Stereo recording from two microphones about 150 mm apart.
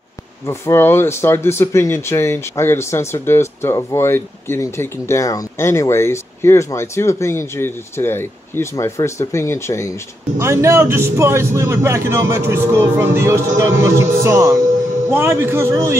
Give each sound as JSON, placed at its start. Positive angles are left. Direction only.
{"t": 0.5, "sound": "speech", "side_deg": 15}
{"t": 10.4, "sound": "a man's voice", "side_deg": -20}